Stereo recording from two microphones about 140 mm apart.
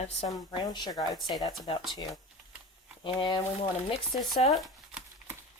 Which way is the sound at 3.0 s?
35° left (ahead or behind).